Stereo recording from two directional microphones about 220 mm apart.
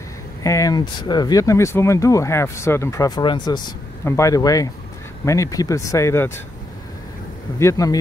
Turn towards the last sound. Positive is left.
turn(degrees=15)  # may be behind; listen again after turning